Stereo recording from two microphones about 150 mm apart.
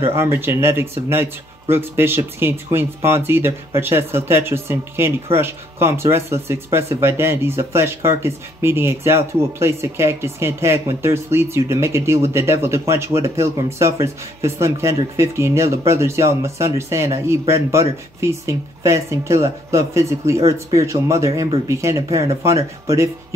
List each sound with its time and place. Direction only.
0.0 s speech: 15° right (ahead or behind)